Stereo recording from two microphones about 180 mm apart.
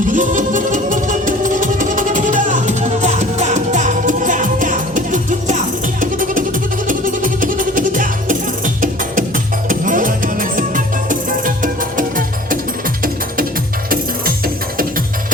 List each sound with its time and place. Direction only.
0.1 s music: 45° right (ahead or behind)
13.9 s music: 55° right (ahead or behind)